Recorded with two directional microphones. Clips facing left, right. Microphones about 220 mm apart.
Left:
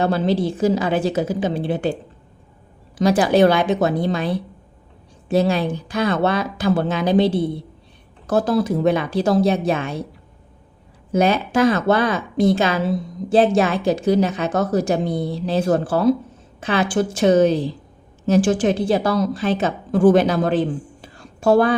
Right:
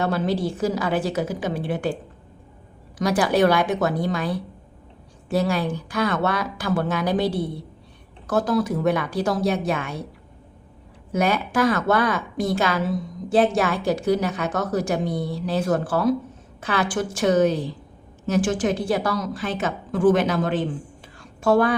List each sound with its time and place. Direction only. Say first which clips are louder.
0.0 s speech: left 4 dB; 30° left (ahead or behind)
3.0 s speech: left 4 dB; 25° left (ahead or behind)
11.1 s a woman's voice: left 4 dB; 25° left (ahead or behind)